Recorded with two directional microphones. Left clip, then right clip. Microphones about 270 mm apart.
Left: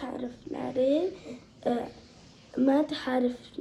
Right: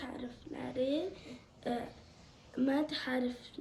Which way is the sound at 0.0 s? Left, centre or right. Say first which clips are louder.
Left 8 dB; centre.